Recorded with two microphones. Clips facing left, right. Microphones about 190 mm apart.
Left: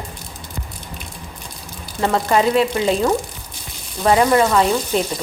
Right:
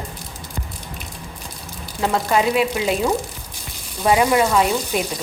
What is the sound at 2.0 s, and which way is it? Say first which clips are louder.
Speech: left 2 dB; 5° right (ahead or behind).